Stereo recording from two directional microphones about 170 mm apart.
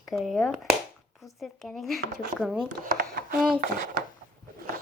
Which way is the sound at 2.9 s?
65° right (ahead or behind).